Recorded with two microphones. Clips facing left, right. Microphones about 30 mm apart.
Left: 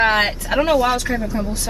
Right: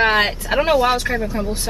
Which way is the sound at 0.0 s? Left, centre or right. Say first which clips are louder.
Even; centre.